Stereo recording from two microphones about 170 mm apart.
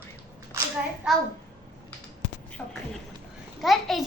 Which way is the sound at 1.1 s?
5° right (ahead or behind).